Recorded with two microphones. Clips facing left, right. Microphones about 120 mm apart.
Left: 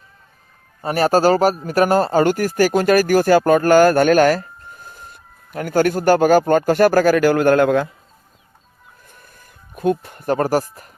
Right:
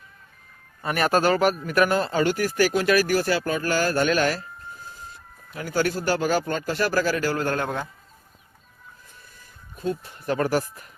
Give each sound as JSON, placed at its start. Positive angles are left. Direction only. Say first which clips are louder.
{"t": 0.8, "sound": "speech", "louder": "left 6 dB", "side_deg": 35}
{"t": 9.7, "sound": "speech", "louder": "left 9 dB", "side_deg": 60}